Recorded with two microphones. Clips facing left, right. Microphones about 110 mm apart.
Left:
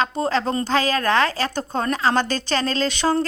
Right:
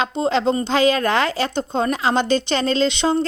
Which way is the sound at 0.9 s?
35° left (ahead or behind).